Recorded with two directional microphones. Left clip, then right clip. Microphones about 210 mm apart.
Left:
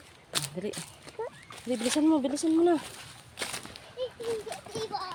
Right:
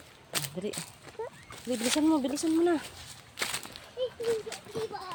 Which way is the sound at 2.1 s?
5° right (ahead or behind).